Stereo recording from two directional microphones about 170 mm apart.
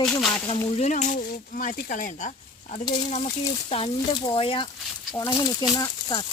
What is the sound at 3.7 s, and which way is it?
Speech, 30° left (ahead or behind).